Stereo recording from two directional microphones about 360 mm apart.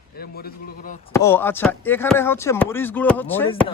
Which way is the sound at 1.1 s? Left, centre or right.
Centre.